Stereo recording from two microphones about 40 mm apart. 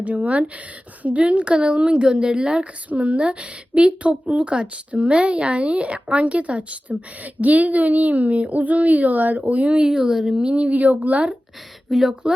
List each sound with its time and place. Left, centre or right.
0.0 s a woman's voice: right; by 10.4 s centre
10.4 s a woman's voice: right
11.9 s speech: centre